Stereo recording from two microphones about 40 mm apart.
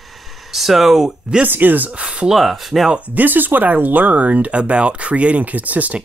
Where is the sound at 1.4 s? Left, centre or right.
Right.